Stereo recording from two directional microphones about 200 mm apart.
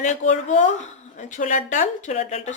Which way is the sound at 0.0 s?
35° left (ahead or behind).